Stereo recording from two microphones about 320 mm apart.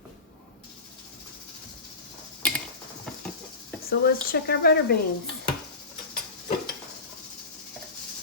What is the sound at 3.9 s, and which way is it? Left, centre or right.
Speech, left.